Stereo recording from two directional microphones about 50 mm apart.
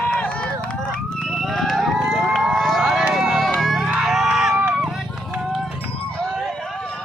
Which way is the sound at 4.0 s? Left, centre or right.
Centre.